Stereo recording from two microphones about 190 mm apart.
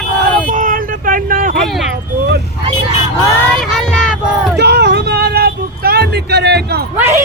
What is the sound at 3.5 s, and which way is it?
Child singing, 5° left (ahead or behind).